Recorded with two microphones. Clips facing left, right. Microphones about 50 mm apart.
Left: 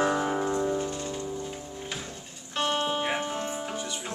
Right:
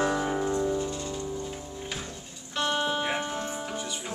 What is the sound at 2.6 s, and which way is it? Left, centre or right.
Music, left.